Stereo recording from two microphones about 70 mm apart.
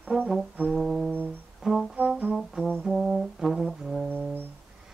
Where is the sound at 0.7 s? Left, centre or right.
Centre.